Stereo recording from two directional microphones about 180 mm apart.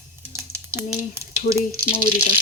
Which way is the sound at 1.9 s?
35° left (ahead or behind).